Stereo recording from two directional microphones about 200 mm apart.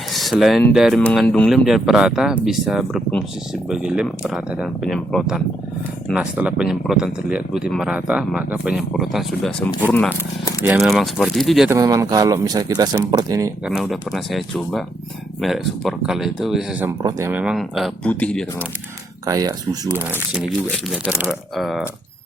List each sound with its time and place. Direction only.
0.1 s speech: centre (ahead or behind)
11.7 s speech: 15° right (ahead or behind)
13.7 s speech: centre (ahead or behind)
17.0 s speech: 20° right (ahead or behind); by 18.4 s 5° left (ahead or behind)
19.2 s speech: 15° right (ahead or behind); by 21.8 s centre (ahead or behind)